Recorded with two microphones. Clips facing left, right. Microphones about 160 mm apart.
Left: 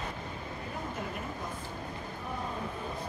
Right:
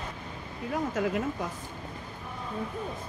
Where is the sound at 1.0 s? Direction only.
90° right.